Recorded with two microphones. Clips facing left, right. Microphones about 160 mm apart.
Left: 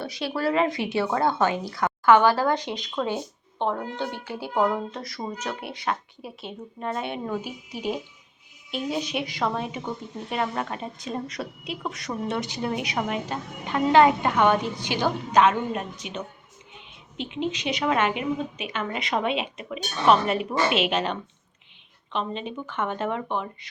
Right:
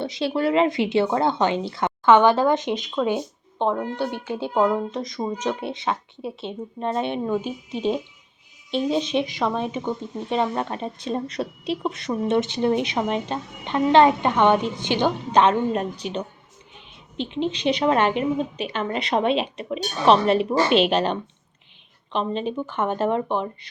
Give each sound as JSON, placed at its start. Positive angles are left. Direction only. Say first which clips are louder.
{"t": 0.0, "sound": "a woman's voice", "louder": "right 4 dB", "side_deg": -25}